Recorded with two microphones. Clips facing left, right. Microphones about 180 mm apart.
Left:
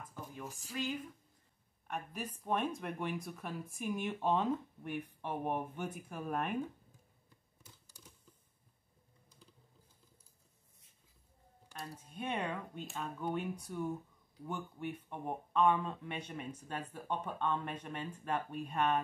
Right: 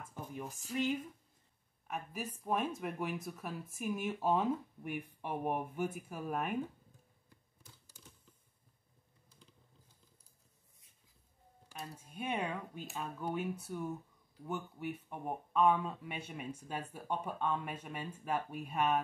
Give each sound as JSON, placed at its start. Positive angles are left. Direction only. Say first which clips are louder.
{"t": 0.0, "sound": "speech", "louder": "right 2 dB", "side_deg": -20}
{"t": 1.9, "sound": "speech", "louder": "even", "side_deg": -10}
{"t": 11.7, "sound": "speech", "louder": "even", "side_deg": -10}